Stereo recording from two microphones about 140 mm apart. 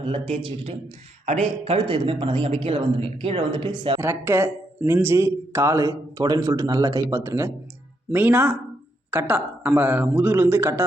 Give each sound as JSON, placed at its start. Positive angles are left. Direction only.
{"t": 0.0, "sound": "a man's voice", "side_deg": -45}
{"t": 4.0, "sound": "a man's voice", "side_deg": -15}